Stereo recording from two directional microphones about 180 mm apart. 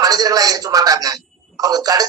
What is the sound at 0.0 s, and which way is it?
Speech, 20° right (ahead or behind).